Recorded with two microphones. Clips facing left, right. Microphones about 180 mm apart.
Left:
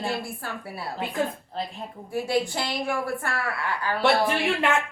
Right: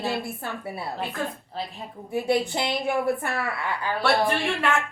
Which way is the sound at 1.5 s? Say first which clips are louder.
Left 2 dB; centre (ahead or behind).